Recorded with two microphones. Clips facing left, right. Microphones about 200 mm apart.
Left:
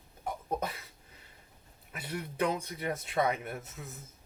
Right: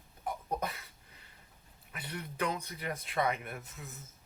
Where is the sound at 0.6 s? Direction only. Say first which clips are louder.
Left 1 dB; 30° left (ahead or behind).